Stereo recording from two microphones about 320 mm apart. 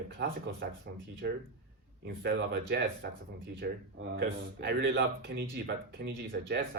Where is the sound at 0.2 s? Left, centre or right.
Right.